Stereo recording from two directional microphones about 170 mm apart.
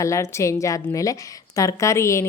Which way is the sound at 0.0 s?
15° left (ahead or behind).